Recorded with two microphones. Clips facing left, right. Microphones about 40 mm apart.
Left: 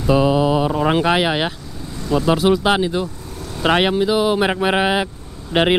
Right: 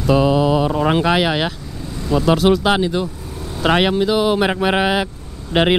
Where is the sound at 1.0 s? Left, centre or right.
Centre.